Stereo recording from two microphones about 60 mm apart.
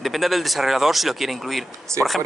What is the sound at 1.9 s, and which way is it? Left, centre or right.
Speech, right.